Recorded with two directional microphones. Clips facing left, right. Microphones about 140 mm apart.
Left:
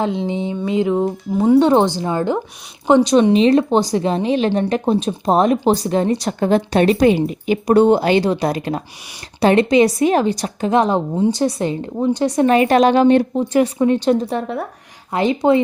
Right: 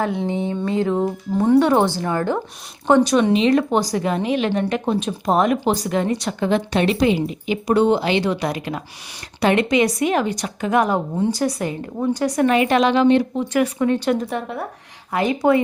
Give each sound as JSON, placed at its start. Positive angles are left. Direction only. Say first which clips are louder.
{"t": 0.0, "sound": "a woman's voice", "louder": "left 2 dB", "side_deg": 20}
{"t": 3.3, "sound": "a woman's voice", "louder": "left 4 dB", "side_deg": 35}
{"t": 12.5, "sound": "a woman's voice", "louder": "left 5 dB", "side_deg": 40}